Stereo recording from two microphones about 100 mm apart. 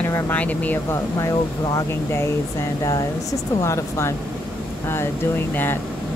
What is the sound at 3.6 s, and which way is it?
Speech, 30° left (ahead or behind).